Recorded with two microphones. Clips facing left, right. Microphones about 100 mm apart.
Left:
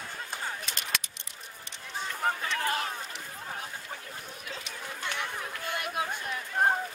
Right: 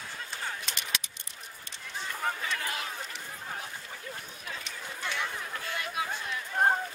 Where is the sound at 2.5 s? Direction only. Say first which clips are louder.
Left 5 dB; 45° left (ahead or behind).